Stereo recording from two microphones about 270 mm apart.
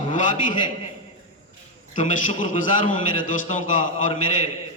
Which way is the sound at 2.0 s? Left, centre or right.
Left.